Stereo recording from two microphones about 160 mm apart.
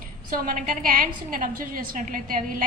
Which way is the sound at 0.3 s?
60° right (ahead or behind).